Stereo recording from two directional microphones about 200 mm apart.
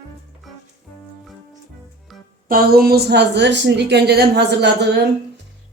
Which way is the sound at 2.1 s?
Centre (ahead or behind).